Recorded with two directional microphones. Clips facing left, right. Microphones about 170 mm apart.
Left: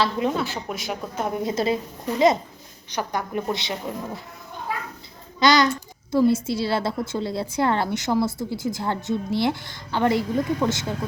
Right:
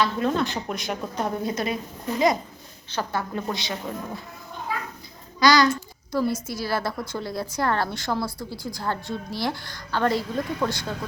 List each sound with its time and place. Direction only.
0.2 s speech: 10° left (ahead or behind)
1.4 s a child's voice: 25° left (ahead or behind)
5.4 s a child's voice: 20° left (ahead or behind)